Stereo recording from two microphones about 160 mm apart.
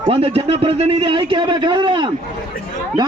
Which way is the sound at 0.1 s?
35° right (ahead or behind).